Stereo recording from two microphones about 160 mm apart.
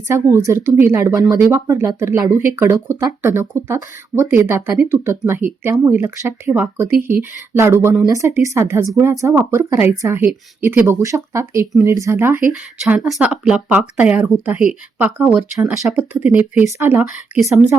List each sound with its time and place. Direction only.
0.1 s speech: 15° right (ahead or behind)
12.8 s speech: centre (ahead or behind)